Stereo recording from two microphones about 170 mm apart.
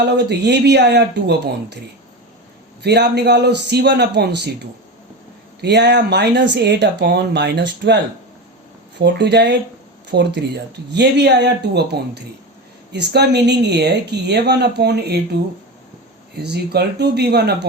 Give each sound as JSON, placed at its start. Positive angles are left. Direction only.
{"t": 0.0, "sound": "speech", "side_deg": -85}
{"t": 2.8, "sound": "speech", "side_deg": -80}
{"t": 16.4, "sound": "speech", "side_deg": -75}